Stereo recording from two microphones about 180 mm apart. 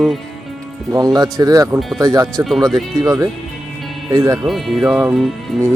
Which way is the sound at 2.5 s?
Centre (ahead or behind).